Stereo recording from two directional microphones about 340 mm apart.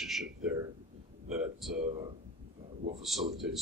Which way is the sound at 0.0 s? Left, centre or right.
Centre.